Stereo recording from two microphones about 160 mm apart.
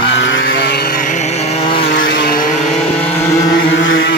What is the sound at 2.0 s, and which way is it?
Vehicle, 85° left.